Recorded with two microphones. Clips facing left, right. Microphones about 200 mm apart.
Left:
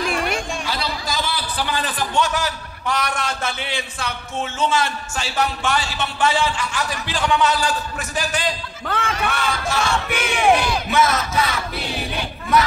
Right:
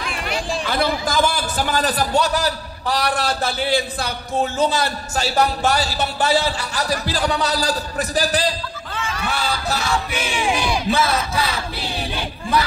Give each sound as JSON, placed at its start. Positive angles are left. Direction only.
{"t": 0.7, "sound": "a man's voice", "side_deg": -50}
{"t": 8.8, "sound": "battle cry", "side_deg": 60}
{"t": 9.3, "sound": "a man's voice", "side_deg": -35}
{"t": 10.0, "sound": "battle cry", "side_deg": 60}
{"t": 10.9, "sound": "a man's voice", "side_deg": -30}